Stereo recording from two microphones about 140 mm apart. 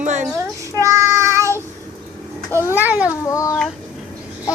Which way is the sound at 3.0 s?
20° left (ahead or behind).